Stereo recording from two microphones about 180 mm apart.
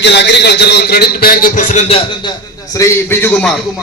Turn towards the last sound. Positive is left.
turn(degrees=5)  # may be behind; listen again after turning